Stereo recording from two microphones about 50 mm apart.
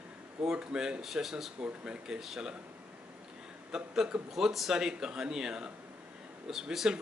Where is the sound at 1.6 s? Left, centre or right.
Right.